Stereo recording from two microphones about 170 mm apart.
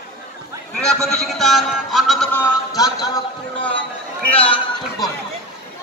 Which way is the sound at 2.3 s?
15° left (ahead or behind).